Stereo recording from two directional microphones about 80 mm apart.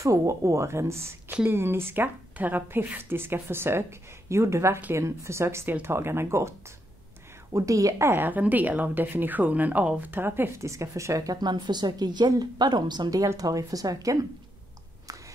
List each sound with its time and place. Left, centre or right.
0.0 s speech: right
7.5 s speech: right
8.3 s speech: right
10.7 s speech: right
11.4 s speech: right
13.2 s speech: right